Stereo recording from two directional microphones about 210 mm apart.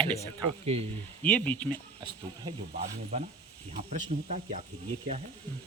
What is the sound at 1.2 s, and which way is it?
Speech, 5° left (ahead or behind).